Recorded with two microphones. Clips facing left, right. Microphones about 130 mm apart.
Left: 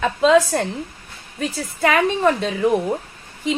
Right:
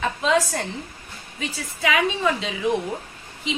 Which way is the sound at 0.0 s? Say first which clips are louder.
Left 6 dB; 65° left (ahead or behind).